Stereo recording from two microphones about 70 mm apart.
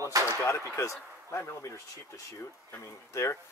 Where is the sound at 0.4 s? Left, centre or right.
Left.